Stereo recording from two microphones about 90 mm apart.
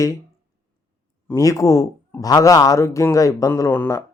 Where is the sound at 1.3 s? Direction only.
35° left (ahead or behind).